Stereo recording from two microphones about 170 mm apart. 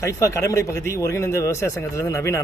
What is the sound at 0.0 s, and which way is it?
Speech, 15° left (ahead or behind).